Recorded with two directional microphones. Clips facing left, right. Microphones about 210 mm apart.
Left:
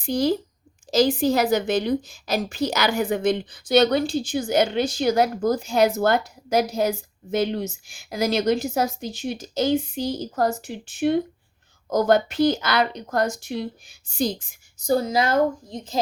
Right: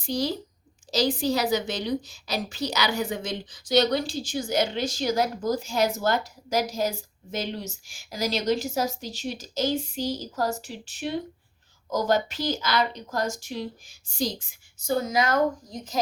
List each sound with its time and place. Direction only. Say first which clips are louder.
0.0 s a woman's voice: left 6 dB; 50° left (ahead or behind)
14.8 s a woman's voice: left 3 dB; 30° left (ahead or behind)